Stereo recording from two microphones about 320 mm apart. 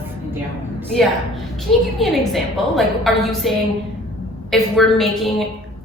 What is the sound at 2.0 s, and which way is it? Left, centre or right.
A woman's voice, centre.